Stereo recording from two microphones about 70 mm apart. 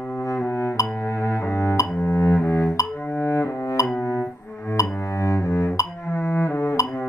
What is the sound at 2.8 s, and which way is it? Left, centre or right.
Music, left.